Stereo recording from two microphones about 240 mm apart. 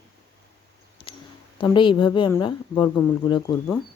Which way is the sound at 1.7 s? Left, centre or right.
Centre.